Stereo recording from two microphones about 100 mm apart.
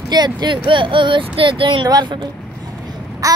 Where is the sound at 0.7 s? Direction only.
55° right (ahead or behind).